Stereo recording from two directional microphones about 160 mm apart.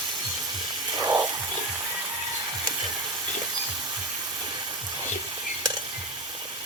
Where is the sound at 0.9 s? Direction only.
25° right (ahead or behind).